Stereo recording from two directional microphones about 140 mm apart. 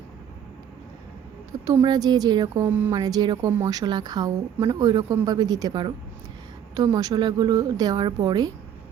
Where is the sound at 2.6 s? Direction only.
15° right (ahead or behind).